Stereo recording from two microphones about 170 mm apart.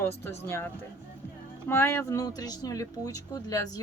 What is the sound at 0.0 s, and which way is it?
Speech, 15° left (ahead or behind).